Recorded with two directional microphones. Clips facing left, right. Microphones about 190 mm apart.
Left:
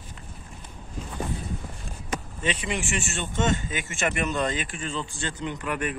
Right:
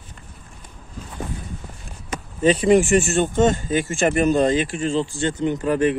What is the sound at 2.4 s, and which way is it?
Speech, 40° right (ahead or behind).